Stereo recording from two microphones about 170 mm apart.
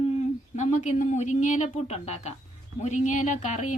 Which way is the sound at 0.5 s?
45° left (ahead or behind).